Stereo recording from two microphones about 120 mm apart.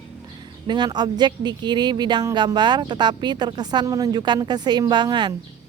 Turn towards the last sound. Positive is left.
turn(degrees=-40)  # may be behind; listen again after turning